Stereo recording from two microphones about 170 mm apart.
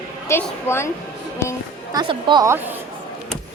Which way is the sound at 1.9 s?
25° right (ahead or behind).